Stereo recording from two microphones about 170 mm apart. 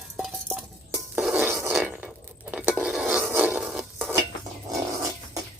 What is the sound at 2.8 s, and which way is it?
Stir, 5° right (ahead or behind).